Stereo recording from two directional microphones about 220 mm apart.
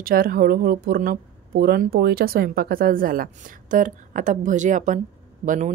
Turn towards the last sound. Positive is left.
turn(degrees=-35)  # may be behind; listen again after turning